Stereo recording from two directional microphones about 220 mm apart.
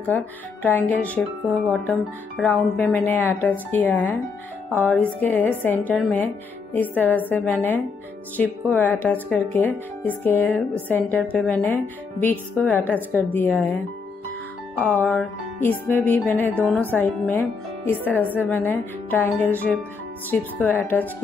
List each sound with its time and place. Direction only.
0.0 s speech: 5° left (ahead or behind)
15.0 s speech: 10° left (ahead or behind)